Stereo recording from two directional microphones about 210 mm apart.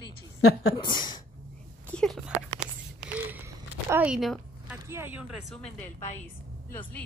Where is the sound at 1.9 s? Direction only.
Centre (ahead or behind).